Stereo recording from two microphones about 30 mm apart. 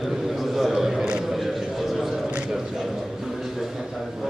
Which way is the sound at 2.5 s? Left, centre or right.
Centre.